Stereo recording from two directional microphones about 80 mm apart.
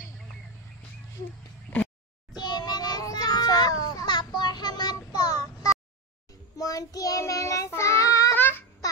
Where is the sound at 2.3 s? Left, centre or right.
Left.